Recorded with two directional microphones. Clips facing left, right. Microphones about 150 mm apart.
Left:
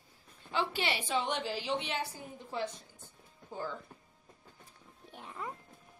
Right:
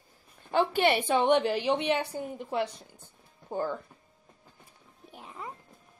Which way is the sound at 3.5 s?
55° right (ahead or behind).